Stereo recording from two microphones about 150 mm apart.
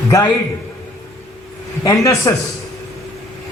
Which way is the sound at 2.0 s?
20° left (ahead or behind).